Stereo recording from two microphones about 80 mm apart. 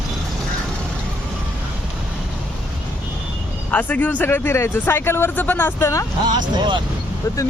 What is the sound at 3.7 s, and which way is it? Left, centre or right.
Speech, centre.